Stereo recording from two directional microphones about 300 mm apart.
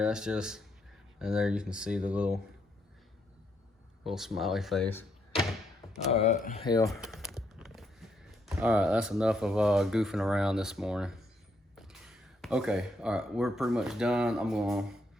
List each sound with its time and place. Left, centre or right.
0.0 s speech: centre
4.0 s speech: centre
6.1 s speech: left
6.8 s speech: centre